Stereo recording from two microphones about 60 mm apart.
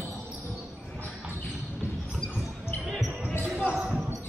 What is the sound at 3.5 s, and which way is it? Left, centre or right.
Basketball bounce, centre.